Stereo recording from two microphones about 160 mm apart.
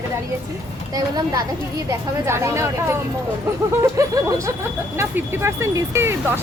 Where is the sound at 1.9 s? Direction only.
15° right (ahead or behind).